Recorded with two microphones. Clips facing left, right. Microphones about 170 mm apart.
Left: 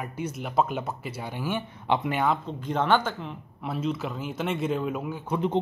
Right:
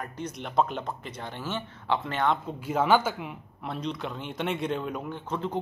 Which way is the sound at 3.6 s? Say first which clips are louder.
Left 4 dB; 5° left (ahead or behind).